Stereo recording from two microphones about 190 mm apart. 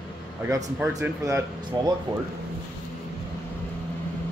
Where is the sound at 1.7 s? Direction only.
25° right (ahead or behind).